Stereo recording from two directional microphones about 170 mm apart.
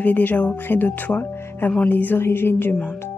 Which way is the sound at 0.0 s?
10° left (ahead or behind).